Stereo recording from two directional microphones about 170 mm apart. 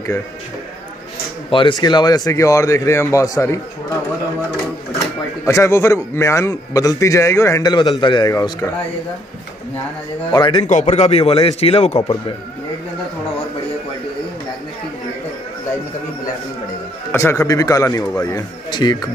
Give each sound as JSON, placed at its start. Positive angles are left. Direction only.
{"t": 1.5, "sound": "speech", "side_deg": 30}
{"t": 4.9, "sound": "speech", "side_deg": 20}
{"t": 10.3, "sound": "speech", "side_deg": 25}
{"t": 10.7, "sound": "a man's voice", "side_deg": 45}
{"t": 17.1, "sound": "speech", "side_deg": 15}